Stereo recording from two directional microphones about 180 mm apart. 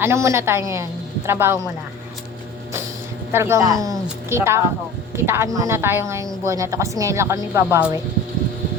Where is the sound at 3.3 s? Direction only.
15° right (ahead or behind).